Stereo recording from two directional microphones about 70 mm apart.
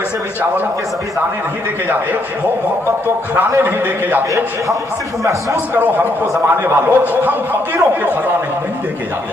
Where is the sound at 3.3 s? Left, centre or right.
Right.